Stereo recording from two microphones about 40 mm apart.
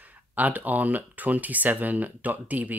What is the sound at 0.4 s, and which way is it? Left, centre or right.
Speech, right.